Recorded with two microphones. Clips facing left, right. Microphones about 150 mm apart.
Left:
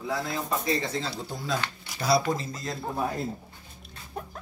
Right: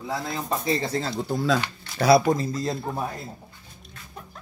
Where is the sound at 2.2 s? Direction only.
35° right (ahead or behind).